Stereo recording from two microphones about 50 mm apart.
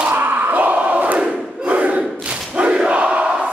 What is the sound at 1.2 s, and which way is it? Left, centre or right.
Crowd, centre.